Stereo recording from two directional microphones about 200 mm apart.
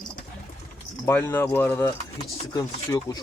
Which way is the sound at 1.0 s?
10° left (ahead or behind).